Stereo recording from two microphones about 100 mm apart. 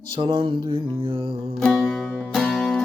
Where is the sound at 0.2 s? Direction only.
60° right (ahead or behind).